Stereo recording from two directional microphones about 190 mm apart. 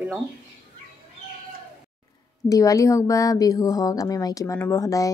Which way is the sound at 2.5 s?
15° left (ahead or behind).